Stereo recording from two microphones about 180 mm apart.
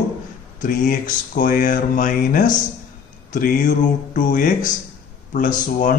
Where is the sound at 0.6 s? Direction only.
45° left (ahead or behind).